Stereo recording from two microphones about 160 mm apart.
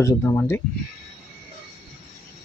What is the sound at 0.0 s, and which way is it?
Speech, 20° left (ahead or behind).